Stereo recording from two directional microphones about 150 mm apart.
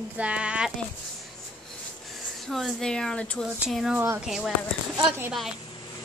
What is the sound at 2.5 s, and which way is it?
Speech, 5° left (ahead or behind).